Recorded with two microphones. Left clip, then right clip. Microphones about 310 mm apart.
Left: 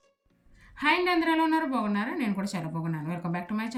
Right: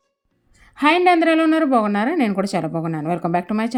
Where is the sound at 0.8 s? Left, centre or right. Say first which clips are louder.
Right 10 dB; centre.